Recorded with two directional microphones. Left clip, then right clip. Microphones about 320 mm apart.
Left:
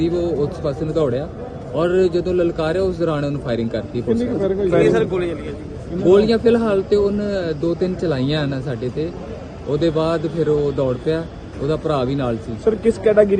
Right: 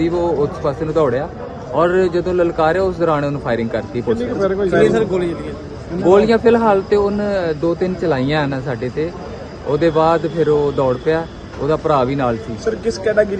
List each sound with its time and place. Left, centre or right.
0.0 s speech: centre
4.1 s a man's voice: left
4.9 s a man's voice: right
6.1 s speech: centre
12.6 s speech: centre